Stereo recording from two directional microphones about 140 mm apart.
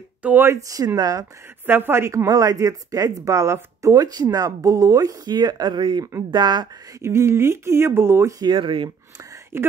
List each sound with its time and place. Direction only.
0.2 s speech: 15° right (ahead or behind)
0.7 s speech: 25° right (ahead or behind)
1.7 s speech: 15° right (ahead or behind)
7.0 s speech: 20° right (ahead or behind); by 8.9 s 35° right (ahead or behind)